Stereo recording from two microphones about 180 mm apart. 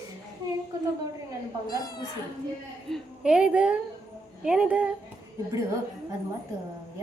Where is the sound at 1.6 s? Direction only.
20° left (ahead or behind).